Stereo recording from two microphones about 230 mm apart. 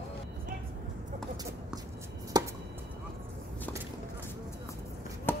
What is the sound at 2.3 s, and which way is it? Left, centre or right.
Chop, centre.